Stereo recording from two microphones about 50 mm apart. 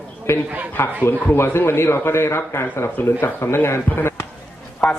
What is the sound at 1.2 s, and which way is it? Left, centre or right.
Speech, left.